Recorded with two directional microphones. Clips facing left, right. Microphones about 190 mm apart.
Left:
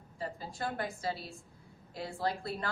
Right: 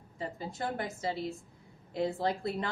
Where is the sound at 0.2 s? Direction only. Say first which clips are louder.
Right 2 dB; 20° right (ahead or behind).